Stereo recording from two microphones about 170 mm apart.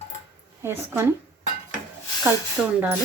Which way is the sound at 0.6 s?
15° right (ahead or behind).